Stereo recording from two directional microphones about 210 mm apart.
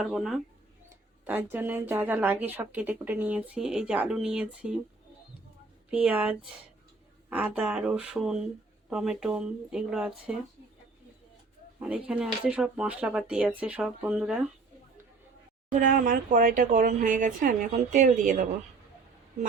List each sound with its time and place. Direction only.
0.0 s speech: centre (ahead or behind)
5.9 s speech: 5° right (ahead or behind)
11.8 s speech: 5° right (ahead or behind)
15.7 s speech: 40° right (ahead or behind)